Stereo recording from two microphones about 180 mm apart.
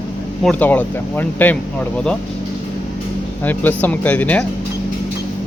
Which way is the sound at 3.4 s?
10° left (ahead or behind).